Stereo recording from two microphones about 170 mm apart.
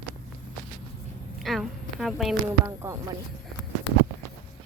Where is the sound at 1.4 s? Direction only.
Centre (ahead or behind).